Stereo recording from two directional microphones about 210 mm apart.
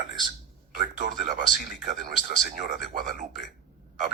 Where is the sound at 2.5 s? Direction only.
40° right (ahead or behind).